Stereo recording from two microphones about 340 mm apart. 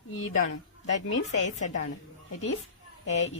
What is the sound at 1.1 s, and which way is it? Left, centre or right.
Speech, left.